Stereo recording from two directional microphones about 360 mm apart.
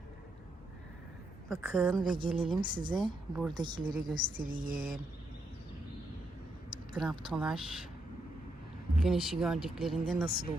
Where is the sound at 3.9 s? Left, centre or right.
Right.